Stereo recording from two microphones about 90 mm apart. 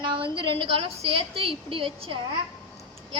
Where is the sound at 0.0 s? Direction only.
65° right (ahead or behind); by 2.1 s 90° right.